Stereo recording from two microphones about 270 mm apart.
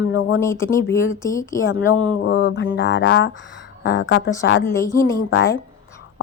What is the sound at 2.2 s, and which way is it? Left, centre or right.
Mantra, left.